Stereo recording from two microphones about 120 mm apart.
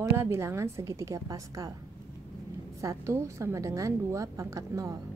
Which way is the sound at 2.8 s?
25° right (ahead or behind).